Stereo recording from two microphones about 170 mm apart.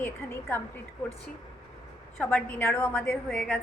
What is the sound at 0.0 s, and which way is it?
Speech, 10° left (ahead or behind).